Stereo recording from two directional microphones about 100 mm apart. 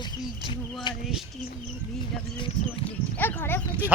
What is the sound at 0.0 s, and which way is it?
Speech, 50° left (ahead or behind).